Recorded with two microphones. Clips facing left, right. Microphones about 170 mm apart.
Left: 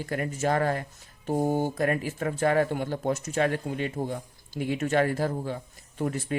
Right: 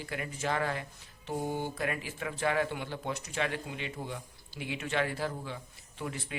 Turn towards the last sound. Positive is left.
turn(degrees=45)  # may be behind; listen again after turning